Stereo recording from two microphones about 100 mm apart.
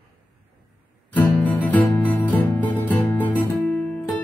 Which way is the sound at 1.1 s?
15° left (ahead or behind).